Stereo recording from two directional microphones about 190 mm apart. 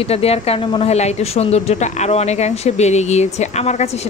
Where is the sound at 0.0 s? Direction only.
30° left (ahead or behind).